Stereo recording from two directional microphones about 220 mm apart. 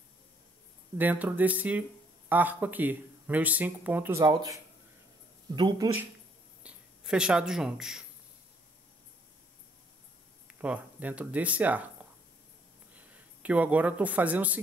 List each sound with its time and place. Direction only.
0.9 s speech: 10° right (ahead or behind)
5.6 s speech: 20° right (ahead or behind)
6.6 s speech: 5° right (ahead or behind)
10.6 s speech: 5° right (ahead or behind)